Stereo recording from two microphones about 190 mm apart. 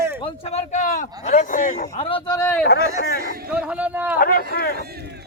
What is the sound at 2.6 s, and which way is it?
Speech, 60° left (ahead or behind).